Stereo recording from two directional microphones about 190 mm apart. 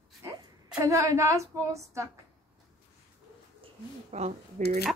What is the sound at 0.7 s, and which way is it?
A woman's voice, 15° right (ahead or behind).